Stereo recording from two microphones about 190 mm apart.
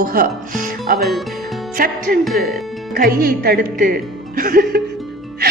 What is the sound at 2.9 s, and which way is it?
Speech, 50° right (ahead or behind).